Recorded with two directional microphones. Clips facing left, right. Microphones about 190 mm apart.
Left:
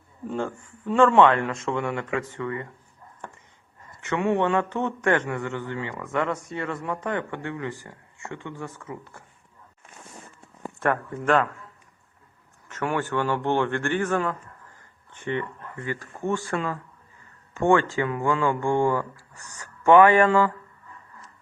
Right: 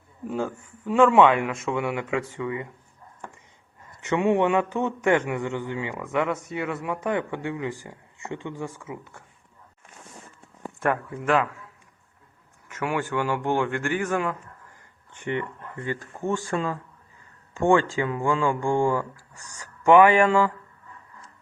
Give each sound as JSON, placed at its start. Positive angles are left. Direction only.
{"t": 0.3, "sound": "speech", "side_deg": -5}
{"t": 4.0, "sound": "speech", "side_deg": -15}
{"t": 10.8, "sound": "speech", "side_deg": -10}
{"t": 12.6, "sound": "speech", "side_deg": -10}